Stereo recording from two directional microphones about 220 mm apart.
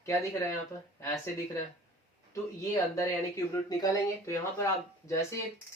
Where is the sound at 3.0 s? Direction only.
15° left (ahead or behind).